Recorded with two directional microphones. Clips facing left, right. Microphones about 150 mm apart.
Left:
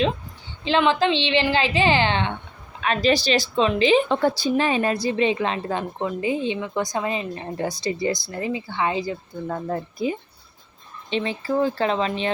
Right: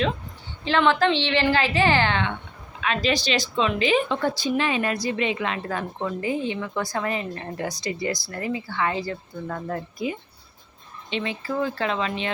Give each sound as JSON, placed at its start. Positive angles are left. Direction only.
{"t": 0.6, "sound": "speech", "side_deg": 15}
{"t": 2.8, "sound": "speech", "side_deg": 40}